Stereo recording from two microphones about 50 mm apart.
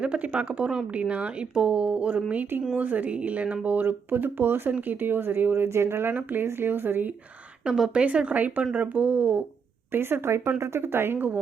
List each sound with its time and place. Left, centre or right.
0.0 s speech: right
2.7 s speech: right
5.6 s speech: right
7.9 s speech: right
9.9 s speech: right
10.6 s speech: right